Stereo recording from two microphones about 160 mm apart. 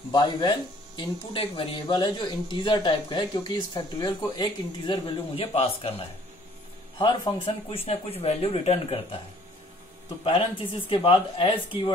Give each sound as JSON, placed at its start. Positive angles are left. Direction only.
{"t": 0.1, "sound": "speech", "side_deg": 30}
{"t": 10.9, "sound": "speech", "side_deg": 35}